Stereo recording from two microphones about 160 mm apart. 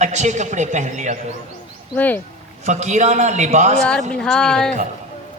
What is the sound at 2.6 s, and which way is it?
A man's voice, 45° right (ahead or behind).